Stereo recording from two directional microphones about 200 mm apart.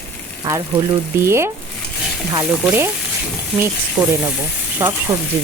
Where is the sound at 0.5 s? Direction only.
15° right (ahead or behind).